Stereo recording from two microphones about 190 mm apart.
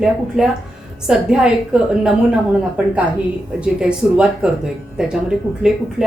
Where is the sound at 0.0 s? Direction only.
5° right (ahead or behind).